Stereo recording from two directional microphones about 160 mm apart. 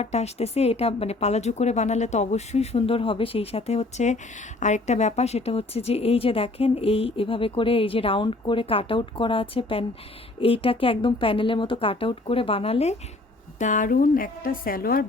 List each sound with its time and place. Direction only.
0.0 s a woman's voice: 40° left (ahead or behind)
13.6 s a woman's voice: 55° left (ahead or behind)